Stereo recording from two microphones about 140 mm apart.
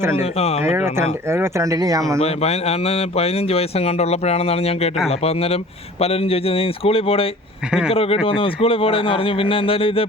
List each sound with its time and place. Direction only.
0.2 s speech: 45° left (ahead or behind)
0.6 s speech: 20° right (ahead or behind)
2.2 s speech: 50° left (ahead or behind)